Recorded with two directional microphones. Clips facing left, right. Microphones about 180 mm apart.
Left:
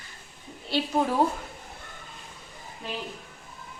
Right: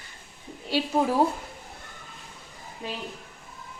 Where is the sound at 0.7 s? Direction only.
10° right (ahead or behind).